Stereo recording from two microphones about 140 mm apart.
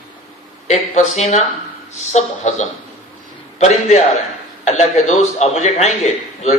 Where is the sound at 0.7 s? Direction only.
55° left (ahead or behind).